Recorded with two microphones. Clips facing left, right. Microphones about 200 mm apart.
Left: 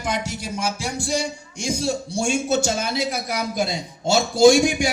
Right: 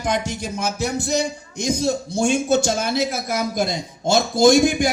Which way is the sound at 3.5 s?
10° left (ahead or behind).